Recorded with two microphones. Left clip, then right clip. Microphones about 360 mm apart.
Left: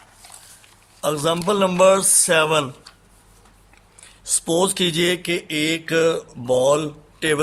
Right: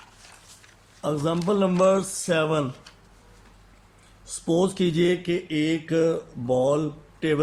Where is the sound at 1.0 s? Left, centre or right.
Left.